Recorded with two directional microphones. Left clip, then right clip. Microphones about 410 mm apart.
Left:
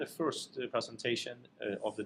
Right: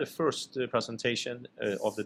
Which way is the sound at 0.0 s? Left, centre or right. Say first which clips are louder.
Right 6 dB; right.